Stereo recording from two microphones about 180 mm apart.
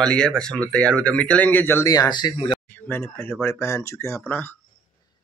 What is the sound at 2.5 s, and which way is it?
Speech, 10° left (ahead or behind).